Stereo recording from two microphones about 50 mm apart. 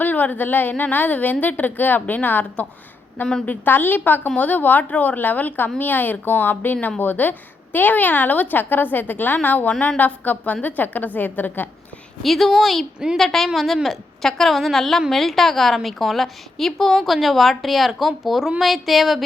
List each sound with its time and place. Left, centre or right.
0.0 s a woman's voice: left
12.2 s a woman's voice: centre